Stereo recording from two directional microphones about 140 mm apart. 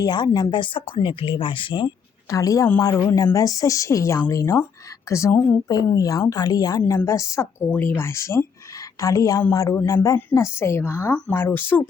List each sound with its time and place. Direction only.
0.0 s speech: 30° left (ahead or behind)
2.3 s a woman's voice: 25° left (ahead or behind)